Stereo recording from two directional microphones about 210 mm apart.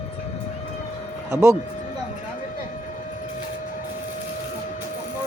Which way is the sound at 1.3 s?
15° right (ahead or behind).